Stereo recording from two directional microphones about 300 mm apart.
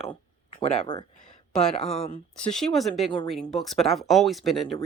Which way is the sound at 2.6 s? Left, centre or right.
Centre.